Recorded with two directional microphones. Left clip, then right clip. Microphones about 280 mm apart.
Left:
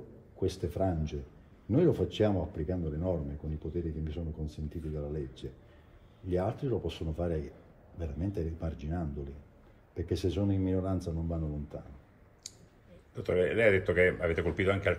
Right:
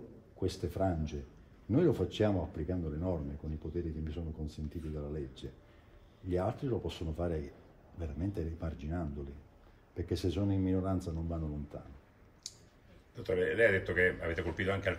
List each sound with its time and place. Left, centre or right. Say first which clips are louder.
0.4 s speech: left 2 dB; centre
12.4 s a sound: even; left
13.1 s speech: left 4 dB; left